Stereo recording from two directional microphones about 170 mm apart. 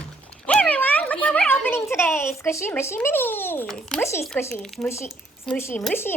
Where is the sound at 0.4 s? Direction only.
5° left (ahead or behind).